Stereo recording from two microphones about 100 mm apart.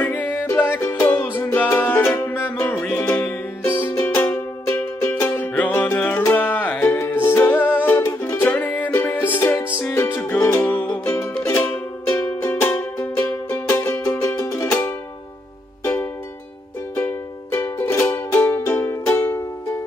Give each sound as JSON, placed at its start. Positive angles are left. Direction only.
{"t": 0.0, "sound": "music", "side_deg": 15}